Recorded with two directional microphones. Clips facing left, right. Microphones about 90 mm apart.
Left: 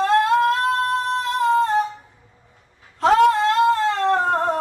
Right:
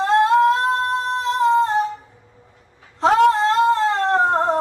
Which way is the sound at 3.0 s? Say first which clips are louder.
Even; 25° right (ahead or behind).